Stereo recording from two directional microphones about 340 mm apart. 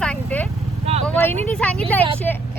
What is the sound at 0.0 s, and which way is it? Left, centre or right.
Vehicle, centre.